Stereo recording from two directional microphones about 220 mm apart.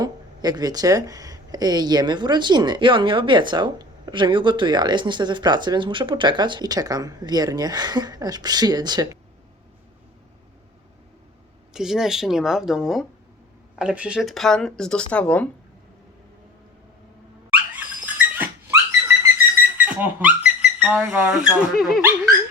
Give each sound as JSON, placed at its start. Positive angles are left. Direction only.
{"t": 0.0, "sound": "speech", "side_deg": -15}
{"t": 11.7, "sound": "speech", "side_deg": 0}
{"t": 17.7, "sound": "dog", "side_deg": -10}
{"t": 19.7, "sound": "speech", "side_deg": -5}